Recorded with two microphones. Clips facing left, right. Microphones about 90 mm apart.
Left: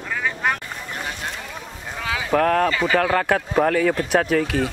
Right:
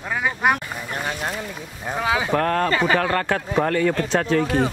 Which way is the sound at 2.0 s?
25° right (ahead or behind).